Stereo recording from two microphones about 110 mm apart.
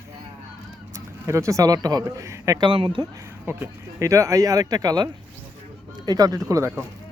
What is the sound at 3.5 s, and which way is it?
Speech, 20° right (ahead or behind).